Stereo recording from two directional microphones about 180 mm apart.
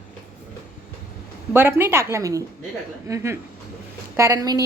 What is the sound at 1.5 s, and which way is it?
A woman's voice, 10° right (ahead or behind).